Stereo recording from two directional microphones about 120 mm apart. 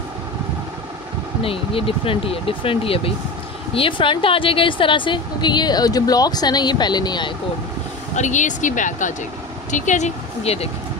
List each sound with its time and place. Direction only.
1.4 s a woman's voice: 50° left (ahead or behind)
8.1 s speech: 85° left; by 10.7 s 60° left (ahead or behind)